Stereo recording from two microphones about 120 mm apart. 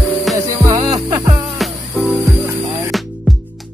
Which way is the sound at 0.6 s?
30° right (ahead or behind).